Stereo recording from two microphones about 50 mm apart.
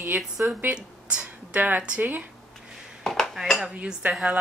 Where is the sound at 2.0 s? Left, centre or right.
Right.